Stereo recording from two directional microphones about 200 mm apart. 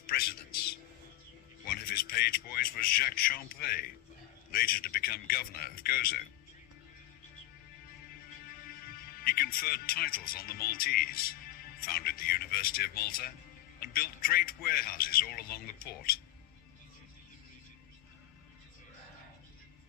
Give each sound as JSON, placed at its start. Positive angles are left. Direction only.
{"t": 0.1, "sound": "music", "side_deg": 50}
{"t": 1.9, "sound": "a sound", "side_deg": 50}
{"t": 4.5, "sound": "a man's voice", "side_deg": 45}
{"t": 8.4, "sound": "a man's voice", "side_deg": 45}